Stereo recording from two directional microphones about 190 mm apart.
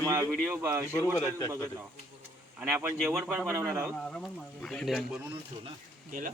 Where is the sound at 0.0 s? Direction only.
15° right (ahead or behind).